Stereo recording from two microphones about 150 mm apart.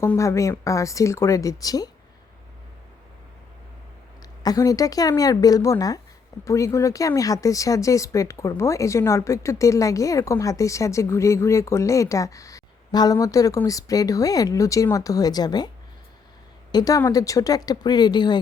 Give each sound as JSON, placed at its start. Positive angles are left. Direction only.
{"t": 0.0, "sound": "speech", "side_deg": 20}
{"t": 4.2, "sound": "a woman's voice", "side_deg": 25}
{"t": 16.7, "sound": "speech", "side_deg": 20}